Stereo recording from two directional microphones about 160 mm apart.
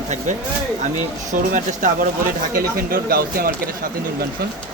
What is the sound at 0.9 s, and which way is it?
Speech, 55° right (ahead or behind).